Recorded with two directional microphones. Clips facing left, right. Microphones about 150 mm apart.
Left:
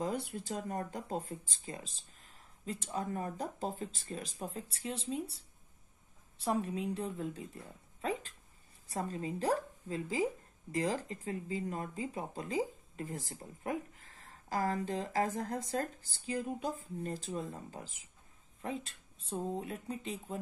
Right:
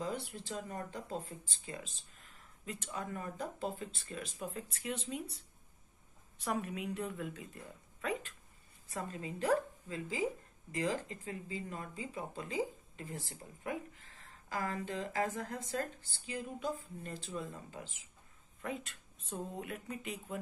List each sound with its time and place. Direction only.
0.3 s a woman's voice: 45° left (ahead or behind)